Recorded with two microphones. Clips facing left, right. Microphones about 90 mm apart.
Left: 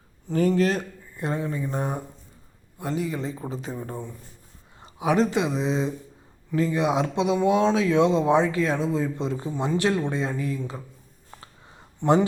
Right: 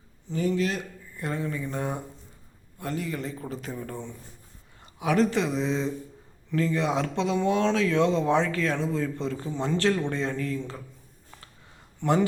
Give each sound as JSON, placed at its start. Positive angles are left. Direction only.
{"t": 0.3, "sound": "speech", "side_deg": 45}
{"t": 1.1, "sound": "speech", "side_deg": 20}
{"t": 11.3, "sound": "a sound", "side_deg": 25}